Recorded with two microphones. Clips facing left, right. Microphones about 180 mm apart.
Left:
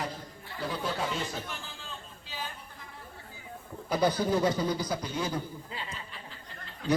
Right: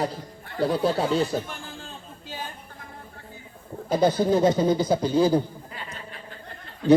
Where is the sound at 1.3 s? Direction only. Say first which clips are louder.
Right 9 dB; 50° right (ahead or behind).